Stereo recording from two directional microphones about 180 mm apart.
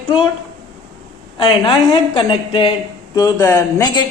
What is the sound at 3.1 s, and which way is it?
Speech, 15° left (ahead or behind).